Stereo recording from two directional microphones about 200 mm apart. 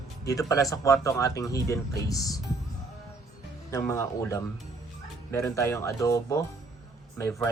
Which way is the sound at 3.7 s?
15° left (ahead or behind).